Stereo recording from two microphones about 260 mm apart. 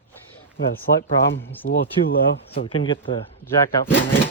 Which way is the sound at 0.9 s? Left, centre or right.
Left.